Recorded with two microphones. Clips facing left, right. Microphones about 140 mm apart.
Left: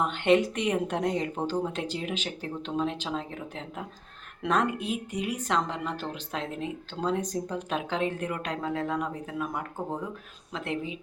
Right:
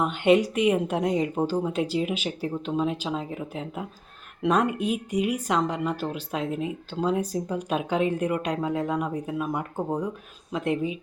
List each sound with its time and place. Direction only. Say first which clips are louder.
0.1 s speech: right 3 dB; 10° right (ahead or behind)